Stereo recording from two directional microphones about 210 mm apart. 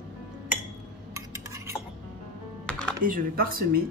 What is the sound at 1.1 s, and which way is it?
Stir, 15° right (ahead or behind).